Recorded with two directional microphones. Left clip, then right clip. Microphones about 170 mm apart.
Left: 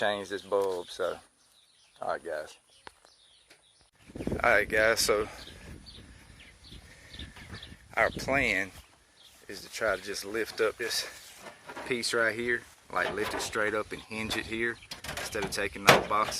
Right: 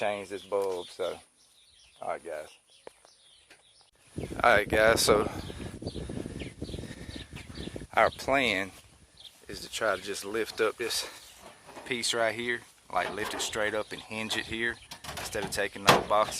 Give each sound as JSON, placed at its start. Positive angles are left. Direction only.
{"t": 0.0, "sound": "speech", "side_deg": 10}
{"t": 0.8, "sound": "speech", "side_deg": 0}
{"t": 4.4, "sound": "speech", "side_deg": -10}
{"t": 7.9, "sound": "speech", "side_deg": -15}
{"t": 11.9, "sound": "speech", "side_deg": 0}